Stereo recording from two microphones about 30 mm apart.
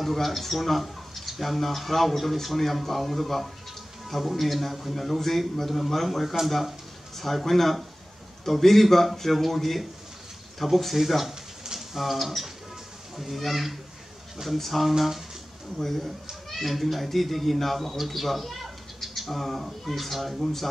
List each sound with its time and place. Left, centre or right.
0.0 s speech: centre
7.2 s a man's voice: centre
11.6 s a sound: centre
12.0 s speech: centre
16.4 s speech: centre